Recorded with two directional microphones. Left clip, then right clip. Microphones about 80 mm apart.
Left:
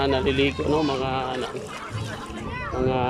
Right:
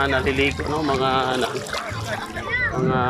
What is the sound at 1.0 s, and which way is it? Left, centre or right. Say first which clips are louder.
Speech: right 6 dB; centre.